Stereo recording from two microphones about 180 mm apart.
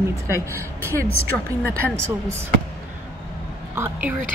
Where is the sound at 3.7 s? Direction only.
10° right (ahead or behind).